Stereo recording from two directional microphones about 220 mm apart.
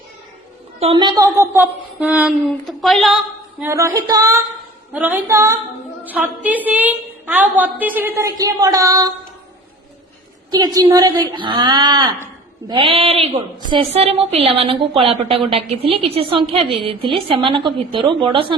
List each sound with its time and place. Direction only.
0.8 s speech: 25° right (ahead or behind); by 3.1 s centre (ahead or behind)
3.6 s a woman's voice: 10° right (ahead or behind)
10.5 s a woman's voice: 20° right (ahead or behind)